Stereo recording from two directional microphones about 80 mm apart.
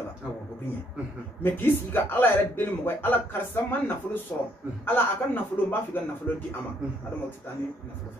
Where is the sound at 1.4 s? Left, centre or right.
Left.